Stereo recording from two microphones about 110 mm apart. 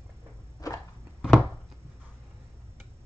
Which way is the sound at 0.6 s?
30° left (ahead or behind).